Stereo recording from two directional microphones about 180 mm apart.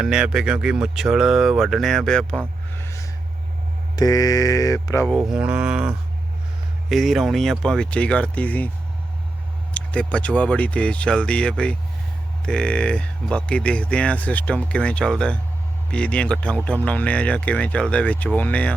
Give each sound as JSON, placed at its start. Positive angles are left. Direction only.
{"t": 0.0, "sound": "speech", "side_deg": -5}
{"t": 2.7, "sound": "a sound", "side_deg": 15}
{"t": 3.9, "sound": "mantra", "side_deg": 20}
{"t": 5.3, "sound": "speech", "side_deg": -5}
{"t": 9.7, "sound": "speech", "side_deg": 5}